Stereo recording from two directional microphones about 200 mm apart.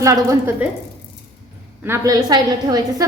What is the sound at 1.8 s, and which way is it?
A woman's voice, 15° right (ahead or behind).